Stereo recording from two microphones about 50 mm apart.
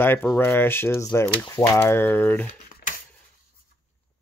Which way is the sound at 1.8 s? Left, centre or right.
Left.